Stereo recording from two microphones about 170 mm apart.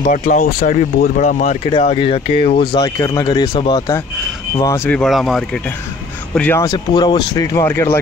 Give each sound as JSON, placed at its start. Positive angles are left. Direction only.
{"t": 0.0, "sound": "speech", "side_deg": 50}
{"t": 1.7, "sound": "speech", "side_deg": 35}
{"t": 2.7, "sound": "speech", "side_deg": 20}
{"t": 6.6, "sound": "speech", "side_deg": 25}